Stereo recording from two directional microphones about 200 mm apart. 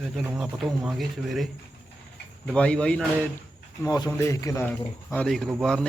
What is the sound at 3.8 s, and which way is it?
Speech, 20° left (ahead or behind).